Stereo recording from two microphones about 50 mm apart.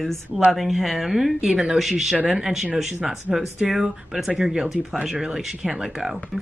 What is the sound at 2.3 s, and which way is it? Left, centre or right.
Speech, centre.